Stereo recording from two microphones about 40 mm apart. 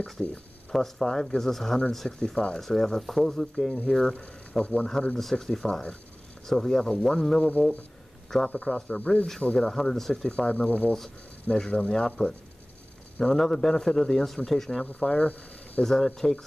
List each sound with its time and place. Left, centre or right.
0.0 s speech: centre
4.2 s speech: left
5.1 s speech: centre
8.5 s speech: left
8.8 s speech: left
9.2 s speech: centre
10.4 s speech: left; by 14.9 s centre
15.0 s speech: left
15.8 s speech: centre